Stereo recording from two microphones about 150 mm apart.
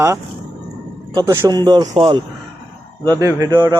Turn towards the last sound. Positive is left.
turn(degrees=-30)  # may be behind; listen again after turning